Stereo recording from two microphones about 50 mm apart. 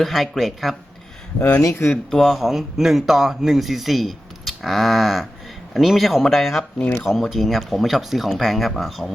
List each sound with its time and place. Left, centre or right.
0.0 s speech: centre
1.7 s speech: left
2.0 s speech: centre